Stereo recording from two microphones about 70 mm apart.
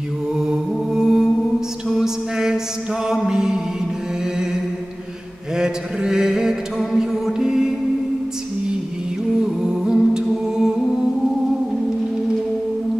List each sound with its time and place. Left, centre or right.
0.3 s mantra: centre
1.9 s a sound: centre
3.1 s music: centre
5.6 s mantra: centre
9.6 s humming: centre